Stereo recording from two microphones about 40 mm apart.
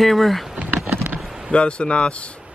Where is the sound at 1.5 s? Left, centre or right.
Left.